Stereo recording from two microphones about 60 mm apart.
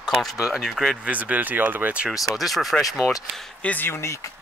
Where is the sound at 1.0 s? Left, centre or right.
Right.